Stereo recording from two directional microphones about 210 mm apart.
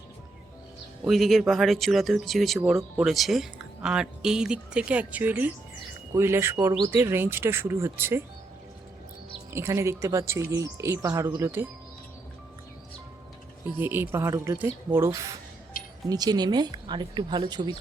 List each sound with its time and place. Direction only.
1.0 s speech: centre (ahead or behind)
9.5 s speech: 15° right (ahead or behind)
13.7 s speech: 10° right (ahead or behind)